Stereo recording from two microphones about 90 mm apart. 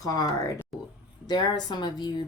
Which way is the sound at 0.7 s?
Centre (ahead or behind).